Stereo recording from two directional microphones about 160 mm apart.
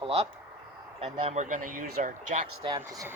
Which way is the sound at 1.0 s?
45° right (ahead or behind).